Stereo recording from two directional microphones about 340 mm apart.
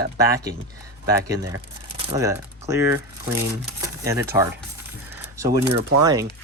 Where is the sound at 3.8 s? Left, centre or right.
Centre.